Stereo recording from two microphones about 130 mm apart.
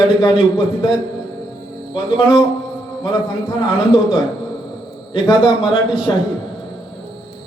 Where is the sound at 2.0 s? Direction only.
40° left (ahead or behind).